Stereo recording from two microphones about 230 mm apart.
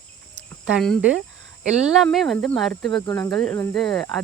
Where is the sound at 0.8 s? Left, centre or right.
Centre.